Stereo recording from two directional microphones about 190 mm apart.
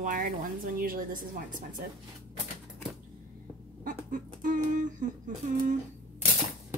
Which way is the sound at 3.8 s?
45° right (ahead or behind).